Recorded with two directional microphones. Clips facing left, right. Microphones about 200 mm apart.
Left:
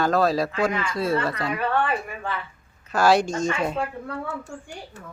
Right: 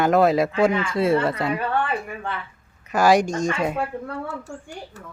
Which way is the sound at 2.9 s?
15° right (ahead or behind).